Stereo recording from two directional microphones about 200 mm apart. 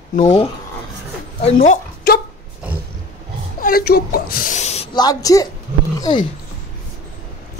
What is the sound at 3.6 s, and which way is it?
Speech, 50° left (ahead or behind).